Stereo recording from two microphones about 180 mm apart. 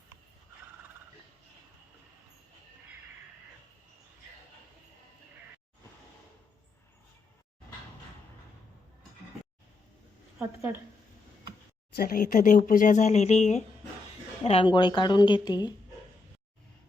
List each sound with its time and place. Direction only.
10.3 s a woman's voice: 10° right (ahead or behind)
11.9 s a woman's voice: 55° left (ahead or behind); by 15.7 s 25° left (ahead or behind)